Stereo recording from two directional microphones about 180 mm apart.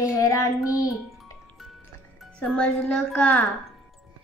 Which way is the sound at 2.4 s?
5° left (ahead or behind).